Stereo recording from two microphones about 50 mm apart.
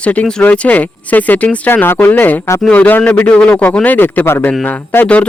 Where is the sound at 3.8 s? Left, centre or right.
Left.